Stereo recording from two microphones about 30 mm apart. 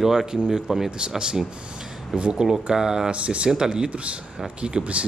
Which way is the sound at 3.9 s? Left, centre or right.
Right.